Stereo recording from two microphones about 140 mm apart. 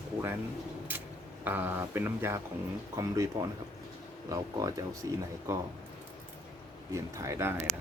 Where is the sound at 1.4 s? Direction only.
15° right (ahead or behind).